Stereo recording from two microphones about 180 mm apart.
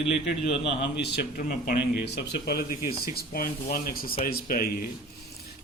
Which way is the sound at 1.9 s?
65° left (ahead or behind).